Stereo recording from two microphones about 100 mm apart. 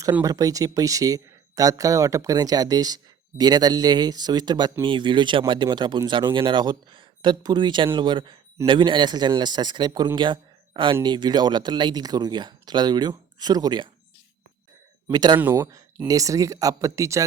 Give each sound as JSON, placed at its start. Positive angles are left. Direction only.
{"t": 0.1, "sound": "speech", "side_deg": -40}
{"t": 15.1, "sound": "speech", "side_deg": -45}
{"t": 15.5, "sound": "speech", "side_deg": -30}